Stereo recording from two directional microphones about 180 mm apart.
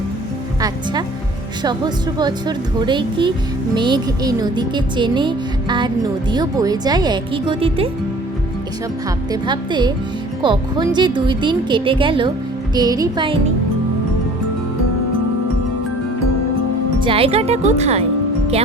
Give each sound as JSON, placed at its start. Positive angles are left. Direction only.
{"t": 1.6, "sound": "speech", "side_deg": -25}
{"t": 9.3, "sound": "speech", "side_deg": -25}
{"t": 17.0, "sound": "speech", "side_deg": -30}